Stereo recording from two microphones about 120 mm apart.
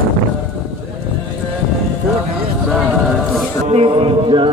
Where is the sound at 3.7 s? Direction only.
50° right (ahead or behind).